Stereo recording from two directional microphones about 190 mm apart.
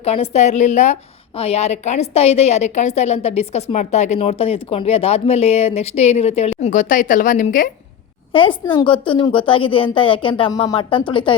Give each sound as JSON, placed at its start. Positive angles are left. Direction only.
{"t": 0.0, "sound": "a woman's voice", "side_deg": 35}
{"t": 8.3, "sound": "a woman's voice", "side_deg": 30}